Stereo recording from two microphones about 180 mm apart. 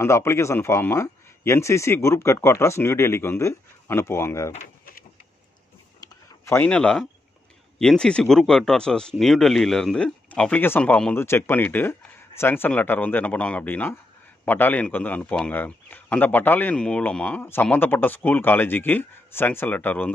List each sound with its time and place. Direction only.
0.0 s a man's voice: 15° left (ahead or behind)
5.9 s a sound: 15° left (ahead or behind)
7.8 s a man's voice: 5° left (ahead or behind)